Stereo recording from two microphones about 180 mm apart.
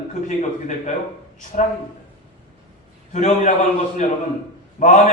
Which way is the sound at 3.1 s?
40° left (ahead or behind).